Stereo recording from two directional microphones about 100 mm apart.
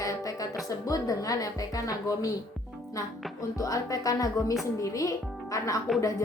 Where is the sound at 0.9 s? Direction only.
35° left (ahead or behind).